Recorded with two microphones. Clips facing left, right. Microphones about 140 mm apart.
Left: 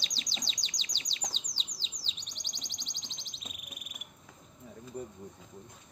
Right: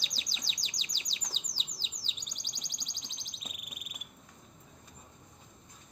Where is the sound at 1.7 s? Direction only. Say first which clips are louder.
Even; 10° right (ahead or behind).